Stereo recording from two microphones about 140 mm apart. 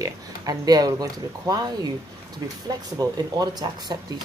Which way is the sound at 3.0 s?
30° right (ahead or behind).